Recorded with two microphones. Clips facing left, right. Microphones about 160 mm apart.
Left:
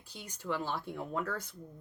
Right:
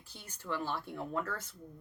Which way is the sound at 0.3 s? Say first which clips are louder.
Left 1 dB; 15° left (ahead or behind).